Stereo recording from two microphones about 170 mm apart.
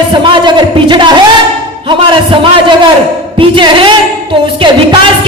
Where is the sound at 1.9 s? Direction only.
30° right (ahead or behind).